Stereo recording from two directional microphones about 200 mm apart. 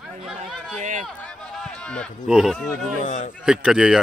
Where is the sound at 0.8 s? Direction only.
40° right (ahead or behind).